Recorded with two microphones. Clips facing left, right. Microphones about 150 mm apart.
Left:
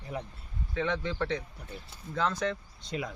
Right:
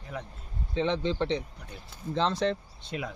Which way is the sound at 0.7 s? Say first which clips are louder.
Right 4 dB; 20° right (ahead or behind).